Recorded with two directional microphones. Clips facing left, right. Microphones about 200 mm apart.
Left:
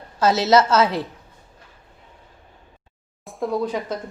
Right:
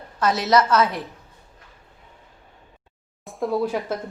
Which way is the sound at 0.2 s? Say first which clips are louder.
Left 3 dB; 25° left (ahead or behind).